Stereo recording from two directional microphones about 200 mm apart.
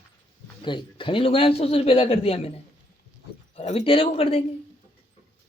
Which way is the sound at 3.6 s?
30° left (ahead or behind).